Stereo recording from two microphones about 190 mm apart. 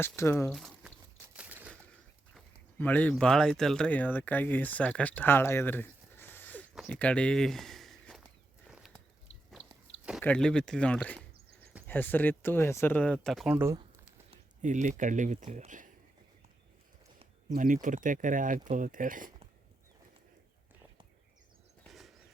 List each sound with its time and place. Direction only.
0.0 s speech: 15° left (ahead or behind)
0.5 s a sound: centre (ahead or behind)
2.3 s speech: 10° left (ahead or behind)
10.1 s speech: centre (ahead or behind)
14.3 s speech: 40° right (ahead or behind)
17.5 s speech: 45° right (ahead or behind)